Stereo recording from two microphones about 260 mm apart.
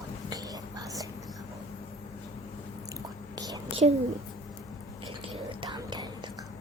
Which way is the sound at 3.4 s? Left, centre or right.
Centre.